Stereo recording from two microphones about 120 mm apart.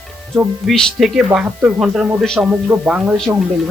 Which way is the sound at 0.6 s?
Centre (ahead or behind).